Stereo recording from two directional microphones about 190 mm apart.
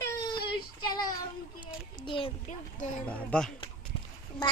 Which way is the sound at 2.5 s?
40° left (ahead or behind).